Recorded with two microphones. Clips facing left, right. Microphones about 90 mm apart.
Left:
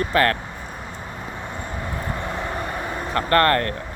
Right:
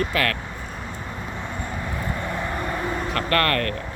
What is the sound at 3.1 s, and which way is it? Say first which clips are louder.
Speech: left 6 dB; 30° left (ahead or behind).